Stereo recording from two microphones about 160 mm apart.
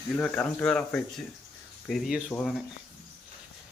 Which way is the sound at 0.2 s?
10° left (ahead or behind).